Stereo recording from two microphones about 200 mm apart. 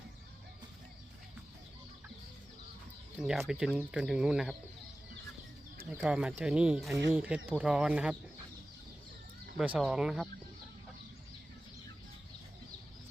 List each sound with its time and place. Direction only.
3.2 s speech: centre (ahead or behind)
6.0 s speech: 5° right (ahead or behind)
9.6 s speech: centre (ahead or behind)